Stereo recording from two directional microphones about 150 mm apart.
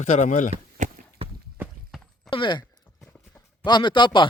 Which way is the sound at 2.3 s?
30° left (ahead or behind).